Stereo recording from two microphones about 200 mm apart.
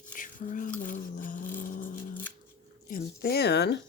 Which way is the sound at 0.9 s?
45° left (ahead or behind).